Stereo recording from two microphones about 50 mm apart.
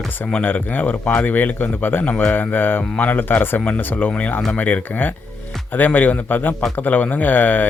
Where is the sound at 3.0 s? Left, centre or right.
Left.